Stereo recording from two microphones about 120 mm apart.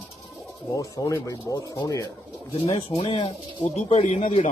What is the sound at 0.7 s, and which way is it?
Speech, 30° left (ahead or behind).